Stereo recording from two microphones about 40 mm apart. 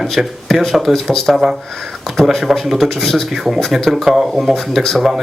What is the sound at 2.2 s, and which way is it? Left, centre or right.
Speech, centre.